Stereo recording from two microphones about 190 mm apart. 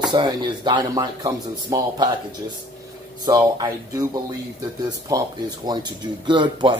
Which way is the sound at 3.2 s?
20° right (ahead or behind).